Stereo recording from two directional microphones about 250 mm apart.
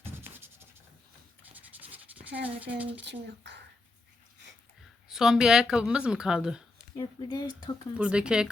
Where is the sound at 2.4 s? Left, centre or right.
Centre.